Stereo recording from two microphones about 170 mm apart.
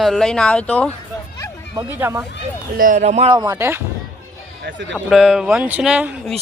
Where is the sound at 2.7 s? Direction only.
50° right (ahead or behind).